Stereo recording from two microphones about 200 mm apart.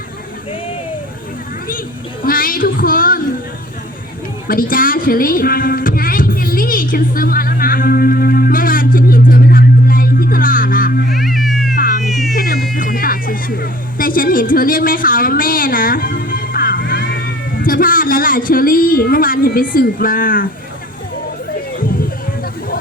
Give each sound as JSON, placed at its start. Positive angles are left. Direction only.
{"t": 2.2, "sound": "a sound", "side_deg": 45}
{"t": 4.4, "sound": "music", "side_deg": 45}
{"t": 11.1, "sound": "music", "side_deg": 0}
{"t": 11.7, "sound": "cat", "side_deg": 45}
{"t": 12.0, "sound": "music", "side_deg": 0}
{"t": 12.3, "sound": "music", "side_deg": 50}